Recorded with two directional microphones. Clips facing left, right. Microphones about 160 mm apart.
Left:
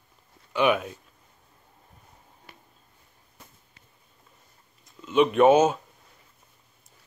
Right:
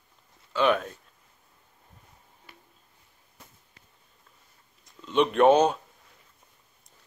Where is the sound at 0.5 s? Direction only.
10° left (ahead or behind).